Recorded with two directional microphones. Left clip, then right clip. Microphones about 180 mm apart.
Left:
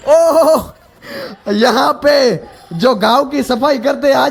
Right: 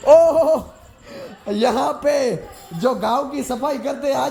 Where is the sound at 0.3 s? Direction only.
35° left (ahead or behind).